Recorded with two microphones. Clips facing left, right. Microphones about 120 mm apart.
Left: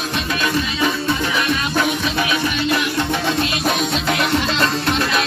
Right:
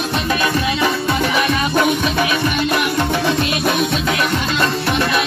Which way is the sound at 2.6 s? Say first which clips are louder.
Right 2 dB; 55° right (ahead or behind).